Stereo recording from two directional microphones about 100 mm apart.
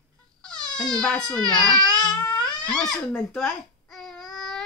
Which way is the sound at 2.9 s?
5° left (ahead or behind).